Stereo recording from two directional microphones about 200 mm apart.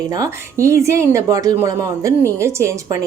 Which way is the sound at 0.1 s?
15° right (ahead or behind).